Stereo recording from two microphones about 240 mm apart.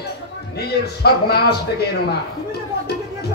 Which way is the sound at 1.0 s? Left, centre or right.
Left.